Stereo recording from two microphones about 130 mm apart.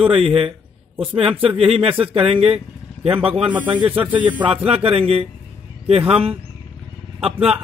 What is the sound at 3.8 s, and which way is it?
Speech, 45° right (ahead or behind).